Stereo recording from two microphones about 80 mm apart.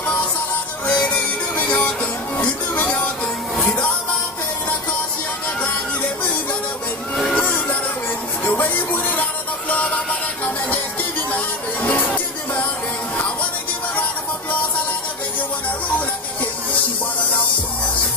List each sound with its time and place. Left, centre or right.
0.8 s music: centre
7.2 s music: centre
7.4 s music: left